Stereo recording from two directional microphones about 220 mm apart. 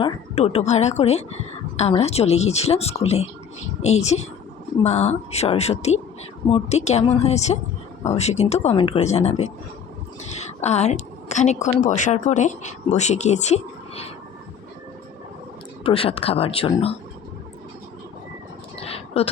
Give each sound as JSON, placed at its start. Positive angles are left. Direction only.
{"t": 0.0, "sound": "a woman's voice", "side_deg": 30}
{"t": 15.8, "sound": "speech", "side_deg": 25}
{"t": 18.8, "sound": "a sound", "side_deg": 25}